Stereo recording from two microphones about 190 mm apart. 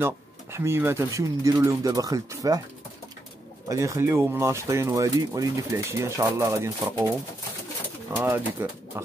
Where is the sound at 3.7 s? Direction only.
15° right (ahead or behind).